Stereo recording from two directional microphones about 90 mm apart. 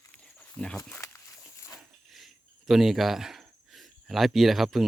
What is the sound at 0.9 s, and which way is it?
Dog, 35° left (ahead or behind).